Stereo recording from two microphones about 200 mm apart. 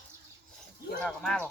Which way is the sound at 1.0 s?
5° left (ahead or behind).